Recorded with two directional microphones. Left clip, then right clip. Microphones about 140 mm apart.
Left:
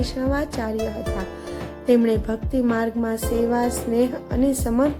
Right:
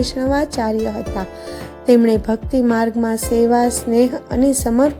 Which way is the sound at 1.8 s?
40° right (ahead or behind).